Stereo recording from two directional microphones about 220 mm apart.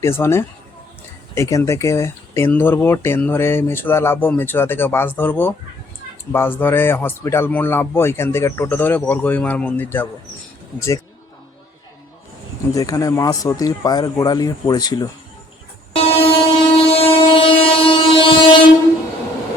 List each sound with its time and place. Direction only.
0.0 s speech: 10° left (ahead or behind)
12.7 s speech: 15° left (ahead or behind)
16.0 s train: 25° left (ahead or behind)